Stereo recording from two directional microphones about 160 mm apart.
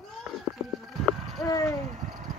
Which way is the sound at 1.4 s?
20° left (ahead or behind).